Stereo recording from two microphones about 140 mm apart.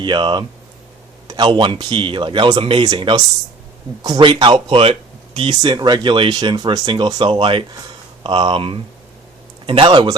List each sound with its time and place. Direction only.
0.0 s speech: 35° right (ahead or behind)